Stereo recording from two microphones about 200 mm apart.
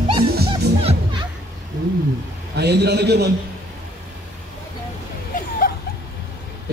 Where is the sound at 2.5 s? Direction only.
55° right (ahead or behind).